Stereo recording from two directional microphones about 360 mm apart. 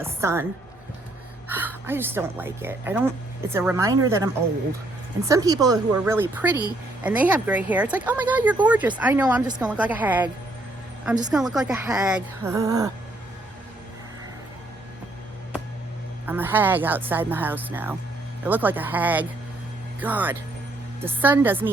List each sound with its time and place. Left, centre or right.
0.0 s a woman's voice: centre
1.5 s a woman's voice: centre
5.3 s a woman's voice: centre
16.2 s speech: centre